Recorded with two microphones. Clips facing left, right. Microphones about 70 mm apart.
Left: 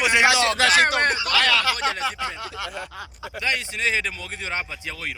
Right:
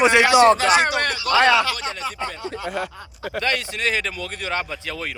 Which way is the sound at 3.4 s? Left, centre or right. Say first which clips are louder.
Right 2 dB; centre.